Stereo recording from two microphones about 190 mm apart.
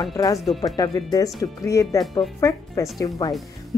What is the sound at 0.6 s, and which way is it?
Speech, 20° left (ahead or behind).